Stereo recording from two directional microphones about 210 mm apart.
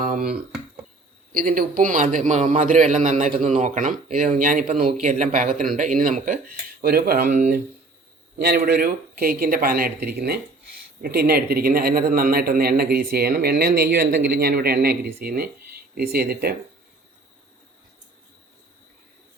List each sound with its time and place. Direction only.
0.0 s a man's voice: 40° right (ahead or behind)
1.3 s a man's voice: 45° right (ahead or behind)